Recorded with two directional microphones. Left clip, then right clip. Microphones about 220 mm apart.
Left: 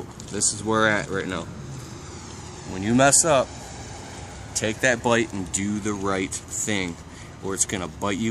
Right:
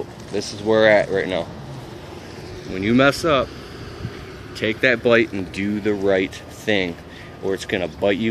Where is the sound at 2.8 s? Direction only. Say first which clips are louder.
Right 2 dB; 20° left (ahead or behind).